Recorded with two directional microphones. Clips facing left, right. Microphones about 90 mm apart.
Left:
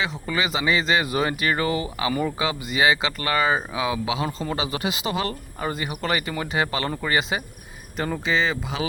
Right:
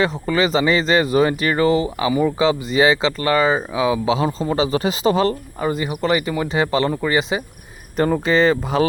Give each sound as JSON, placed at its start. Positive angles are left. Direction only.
{"t": 0.0, "sound": "speech", "side_deg": -35}
{"t": 5.5, "sound": "speech", "side_deg": -20}
{"t": 7.9, "sound": "speech", "side_deg": -45}